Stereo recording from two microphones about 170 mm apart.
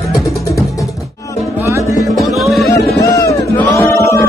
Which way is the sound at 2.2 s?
Centre (ahead or behind).